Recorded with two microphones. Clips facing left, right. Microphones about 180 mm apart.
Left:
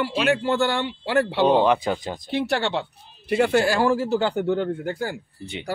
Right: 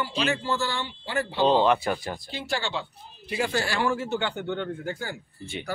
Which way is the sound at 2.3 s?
65° left (ahead or behind).